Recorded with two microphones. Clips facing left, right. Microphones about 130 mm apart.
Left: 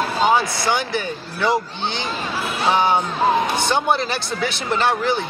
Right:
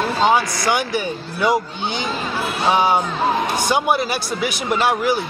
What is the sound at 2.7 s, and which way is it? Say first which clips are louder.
Speech: right 1 dB; 10° right (ahead or behind).